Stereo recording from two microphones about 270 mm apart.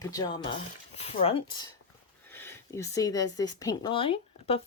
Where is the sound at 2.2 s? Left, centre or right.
Centre.